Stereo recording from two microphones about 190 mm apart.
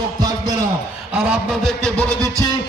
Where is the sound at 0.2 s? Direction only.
20° right (ahead or behind).